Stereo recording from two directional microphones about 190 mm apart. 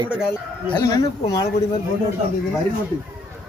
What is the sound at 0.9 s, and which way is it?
Speech, 20° left (ahead or behind).